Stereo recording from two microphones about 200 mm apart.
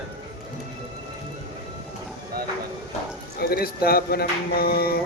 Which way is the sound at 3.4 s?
50° left (ahead or behind).